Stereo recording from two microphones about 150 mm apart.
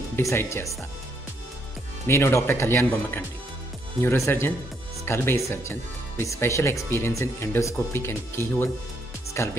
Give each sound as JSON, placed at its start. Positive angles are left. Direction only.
{"t": 0.1, "sound": "speech", "side_deg": 15}
{"t": 2.0, "sound": "speech", "side_deg": 20}